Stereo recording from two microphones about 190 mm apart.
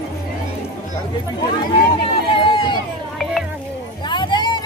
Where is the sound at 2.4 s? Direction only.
25° left (ahead or behind).